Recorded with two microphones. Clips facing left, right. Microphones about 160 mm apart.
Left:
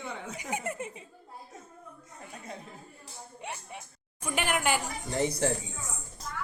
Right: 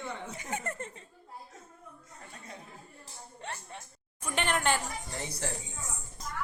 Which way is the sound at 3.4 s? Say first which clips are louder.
Left 1 dB; 10° left (ahead or behind).